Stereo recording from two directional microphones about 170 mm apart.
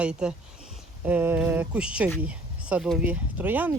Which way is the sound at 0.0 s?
5° right (ahead or behind).